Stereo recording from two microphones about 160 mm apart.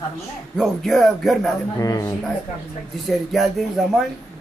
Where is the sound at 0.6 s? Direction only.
Centre (ahead or behind).